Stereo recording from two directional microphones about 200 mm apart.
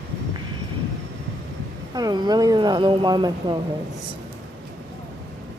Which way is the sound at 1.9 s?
20° right (ahead or behind).